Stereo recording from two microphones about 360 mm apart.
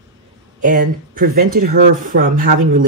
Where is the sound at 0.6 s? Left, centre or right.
Right.